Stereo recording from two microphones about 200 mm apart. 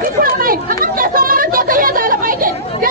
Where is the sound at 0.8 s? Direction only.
45° right (ahead or behind).